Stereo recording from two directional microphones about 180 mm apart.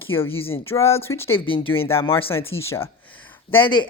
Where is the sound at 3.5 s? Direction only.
25° left (ahead or behind).